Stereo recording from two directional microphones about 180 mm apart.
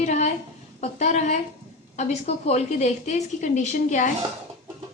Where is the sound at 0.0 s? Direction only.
40° left (ahead or behind).